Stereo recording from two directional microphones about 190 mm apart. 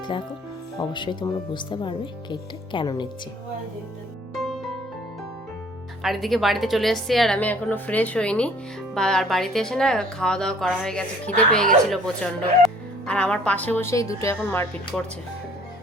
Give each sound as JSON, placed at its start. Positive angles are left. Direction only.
{"t": 0.8, "sound": "speech", "side_deg": 25}
{"t": 4.4, "sound": "music", "side_deg": 0}
{"t": 6.0, "sound": "a woman's voice", "side_deg": 0}